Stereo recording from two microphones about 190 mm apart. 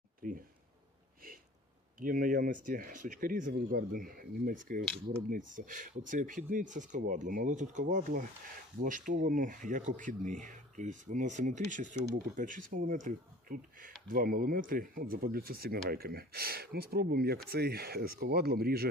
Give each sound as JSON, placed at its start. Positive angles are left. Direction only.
{"t": 0.2, "sound": "speech", "side_deg": -45}
{"t": 2.0, "sound": "speech", "side_deg": -50}